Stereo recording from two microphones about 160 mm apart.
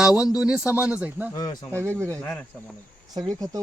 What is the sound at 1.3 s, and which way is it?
Speech, 25° left (ahead or behind).